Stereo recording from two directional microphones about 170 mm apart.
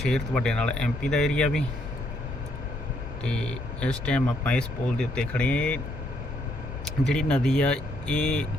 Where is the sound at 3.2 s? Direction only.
5° left (ahead or behind).